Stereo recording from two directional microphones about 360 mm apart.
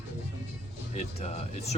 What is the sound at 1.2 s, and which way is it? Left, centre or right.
Speech, centre.